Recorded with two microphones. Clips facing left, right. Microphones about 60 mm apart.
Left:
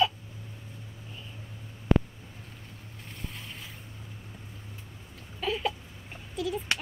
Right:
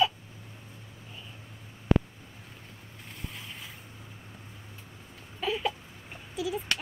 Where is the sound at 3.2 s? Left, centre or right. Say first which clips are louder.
Even; centre.